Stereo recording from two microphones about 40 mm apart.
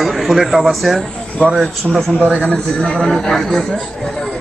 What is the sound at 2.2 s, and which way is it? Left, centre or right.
Speech, right.